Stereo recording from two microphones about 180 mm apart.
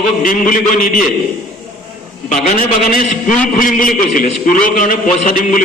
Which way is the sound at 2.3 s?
45° left (ahead or behind).